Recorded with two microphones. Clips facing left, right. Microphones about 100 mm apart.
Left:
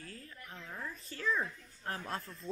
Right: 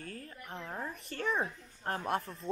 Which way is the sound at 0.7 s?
30° right (ahead or behind).